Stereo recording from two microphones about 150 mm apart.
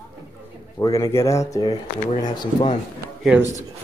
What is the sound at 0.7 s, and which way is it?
Speech, 25° left (ahead or behind).